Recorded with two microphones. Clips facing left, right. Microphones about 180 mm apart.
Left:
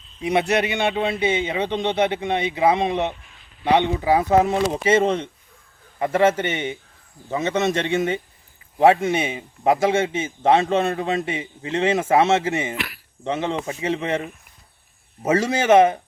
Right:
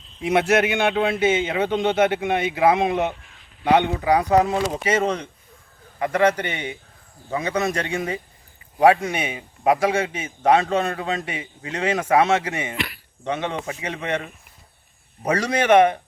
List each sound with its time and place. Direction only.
0.2 s a man's voice: 5° right (ahead or behind)
3.6 s a man's voice: 20° left (ahead or behind)
12.7 s a man's voice: centre (ahead or behind)
13.2 s a man's voice: 25° left (ahead or behind)